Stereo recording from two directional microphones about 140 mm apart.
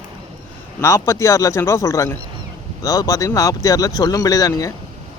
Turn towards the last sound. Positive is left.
turn(degrees=25)  # may be behind; listen again after turning